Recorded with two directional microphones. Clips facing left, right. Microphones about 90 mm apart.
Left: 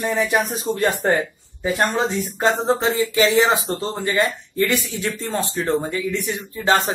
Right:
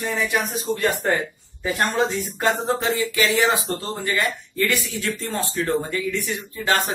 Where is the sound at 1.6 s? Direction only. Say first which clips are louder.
Left 1 dB; 20° left (ahead or behind).